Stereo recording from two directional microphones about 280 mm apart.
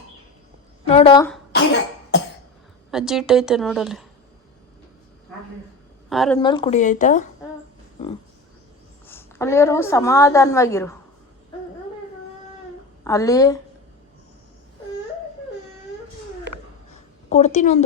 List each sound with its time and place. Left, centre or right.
0.9 s a sound: left
2.9 s a woman's voice: centre
6.1 s a woman's voice: centre
6.4 s speech: centre
9.0 s a woman's voice: centre
13.1 s a woman's voice: centre
17.2 s a woman's voice: left